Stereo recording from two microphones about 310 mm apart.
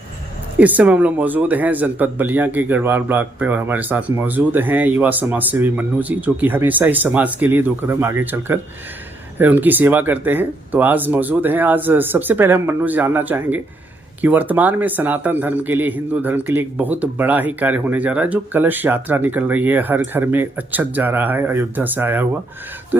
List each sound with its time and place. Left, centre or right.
0.6 s speech: centre